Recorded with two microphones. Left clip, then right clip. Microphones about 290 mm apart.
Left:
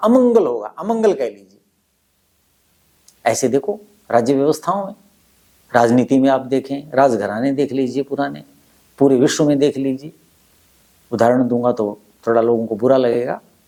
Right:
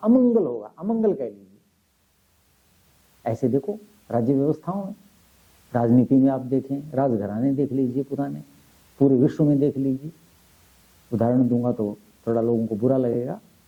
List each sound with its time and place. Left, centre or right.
0.0 s speech: centre
3.2 s speech: centre
3.6 s speech: left
4.1 s speech: centre
11.1 s speech: centre
12.5 s speech: left
12.8 s speech: centre